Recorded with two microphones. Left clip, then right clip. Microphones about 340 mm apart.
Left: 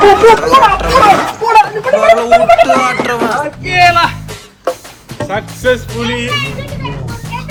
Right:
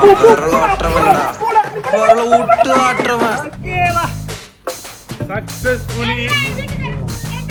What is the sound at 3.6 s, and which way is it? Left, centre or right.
Speech, left.